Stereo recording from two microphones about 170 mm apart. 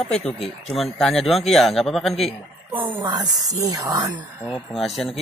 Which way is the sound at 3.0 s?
25° right (ahead or behind).